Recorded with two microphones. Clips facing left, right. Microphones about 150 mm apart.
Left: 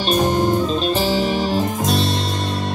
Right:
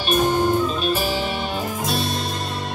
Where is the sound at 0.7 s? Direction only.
35° left (ahead or behind).